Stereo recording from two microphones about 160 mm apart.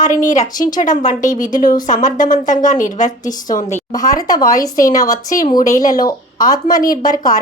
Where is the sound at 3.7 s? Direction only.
20° left (ahead or behind).